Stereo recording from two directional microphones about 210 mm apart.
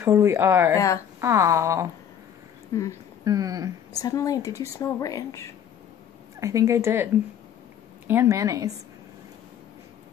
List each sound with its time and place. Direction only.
0.0 s speech: 10° right (ahead or behind)
0.7 s a woman's voice: 15° left (ahead or behind)
1.2 s speech: 15° right (ahead or behind)
2.7 s a woman's voice: 15° left (ahead or behind)
3.3 s speech: 15° right (ahead or behind)
3.9 s a woman's voice: 15° left (ahead or behind)
6.4 s speech: 15° right (ahead or behind)
8.1 s speech: 10° right (ahead or behind)